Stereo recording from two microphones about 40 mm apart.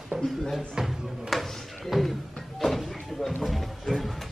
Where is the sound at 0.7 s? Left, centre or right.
Centre.